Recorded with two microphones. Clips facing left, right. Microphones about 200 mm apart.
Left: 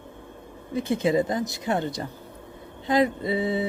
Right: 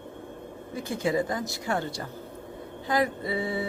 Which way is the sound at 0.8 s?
20° left (ahead or behind).